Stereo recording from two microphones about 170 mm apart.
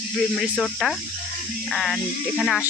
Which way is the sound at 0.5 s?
5° left (ahead or behind).